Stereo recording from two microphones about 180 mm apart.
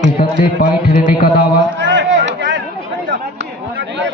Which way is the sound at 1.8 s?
90° right.